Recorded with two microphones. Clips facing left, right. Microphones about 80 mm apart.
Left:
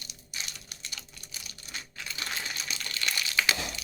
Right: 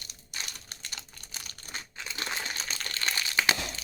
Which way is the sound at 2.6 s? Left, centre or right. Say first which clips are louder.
Right 1 dB; right.